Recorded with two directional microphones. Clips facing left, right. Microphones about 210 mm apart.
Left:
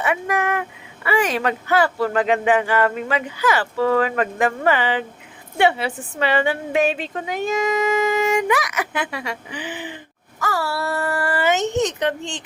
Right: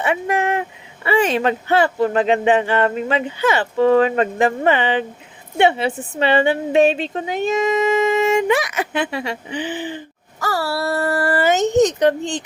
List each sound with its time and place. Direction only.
0.0 s a woman's voice: 25° right (ahead or behind)